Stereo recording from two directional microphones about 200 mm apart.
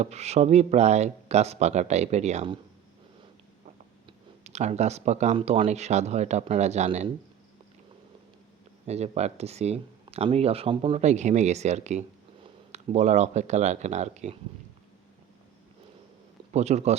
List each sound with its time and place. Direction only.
0.0 s speech: 35° right (ahead or behind)
4.4 s speech: 35° right (ahead or behind)
8.9 s speech: 35° right (ahead or behind)
16.5 s speech: 35° right (ahead or behind)